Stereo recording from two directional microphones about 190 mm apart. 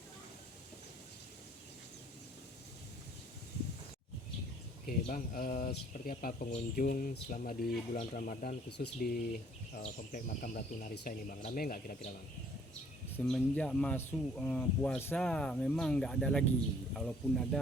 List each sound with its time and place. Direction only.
4.9 s speech: 45° left (ahead or behind)
8.8 s speech: 55° left (ahead or behind)
9.7 s speech: 40° left (ahead or behind)
13.1 s speech: 5° left (ahead or behind)